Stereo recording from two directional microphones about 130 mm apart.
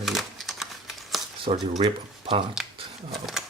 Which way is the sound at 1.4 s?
35° right (ahead or behind).